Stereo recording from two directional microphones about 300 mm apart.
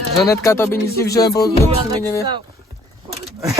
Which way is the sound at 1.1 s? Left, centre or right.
Left.